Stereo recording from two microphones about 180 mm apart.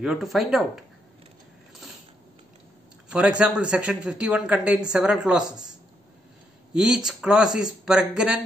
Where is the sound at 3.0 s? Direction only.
5° right (ahead or behind).